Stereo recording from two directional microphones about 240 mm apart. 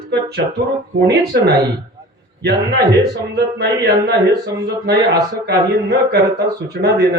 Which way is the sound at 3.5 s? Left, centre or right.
Right.